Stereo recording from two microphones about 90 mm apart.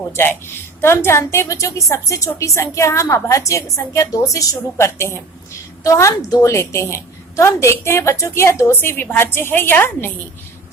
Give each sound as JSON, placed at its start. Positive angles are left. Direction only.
{"t": 0.2, "sound": "a woman's voice", "side_deg": 25}